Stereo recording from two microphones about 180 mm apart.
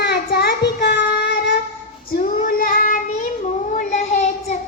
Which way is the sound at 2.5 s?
50° left (ahead or behind).